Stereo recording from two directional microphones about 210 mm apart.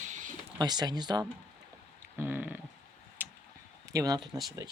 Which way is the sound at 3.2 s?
10° right (ahead or behind).